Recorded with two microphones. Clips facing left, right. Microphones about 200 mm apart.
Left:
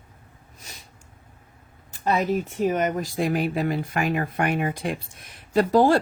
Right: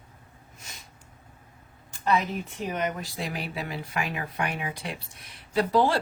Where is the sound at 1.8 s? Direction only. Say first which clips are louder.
Left 3 dB; 45° left (ahead or behind).